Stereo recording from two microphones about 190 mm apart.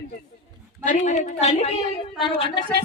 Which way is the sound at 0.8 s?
40° left (ahead or behind).